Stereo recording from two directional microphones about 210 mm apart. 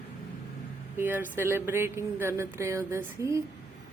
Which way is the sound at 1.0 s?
10° right (ahead or behind).